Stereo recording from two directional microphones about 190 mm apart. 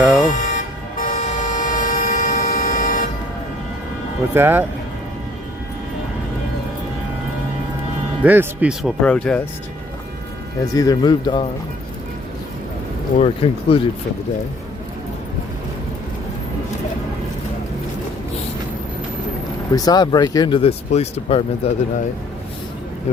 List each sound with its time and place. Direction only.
0.2 s toot: 45° left (ahead or behind)
4.4 s speech: 10° right (ahead or behind)
8.2 s speech: 10° right (ahead or behind)
10.8 s speech: 20° left (ahead or behind)
13.1 s speech: 30° left (ahead or behind)
19.7 s speech: 20° left (ahead or behind)
23.1 s speech: 35° left (ahead or behind)